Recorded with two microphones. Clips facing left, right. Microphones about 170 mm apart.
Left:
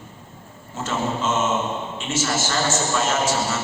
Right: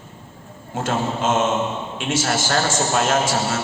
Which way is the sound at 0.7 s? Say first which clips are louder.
Right 2 dB; 55° right (ahead or behind).